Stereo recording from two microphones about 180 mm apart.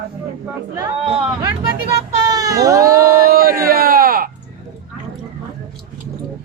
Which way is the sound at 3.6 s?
55° right (ahead or behind).